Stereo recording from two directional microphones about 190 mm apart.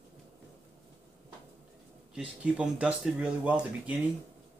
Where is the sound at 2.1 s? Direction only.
5° right (ahead or behind).